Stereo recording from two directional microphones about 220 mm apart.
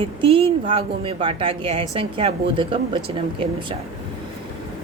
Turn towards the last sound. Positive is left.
turn(degrees=-25)  # may be behind; listen again after turning